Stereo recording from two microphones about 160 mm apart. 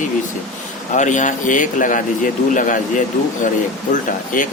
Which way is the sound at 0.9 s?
50° left (ahead or behind).